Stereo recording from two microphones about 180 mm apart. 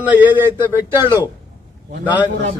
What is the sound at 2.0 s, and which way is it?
Speech, 10° right (ahead or behind).